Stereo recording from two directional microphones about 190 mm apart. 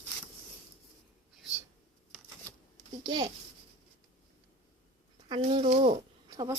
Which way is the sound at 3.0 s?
20° right (ahead or behind).